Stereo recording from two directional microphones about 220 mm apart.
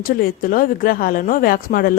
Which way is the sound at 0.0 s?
40° left (ahead or behind).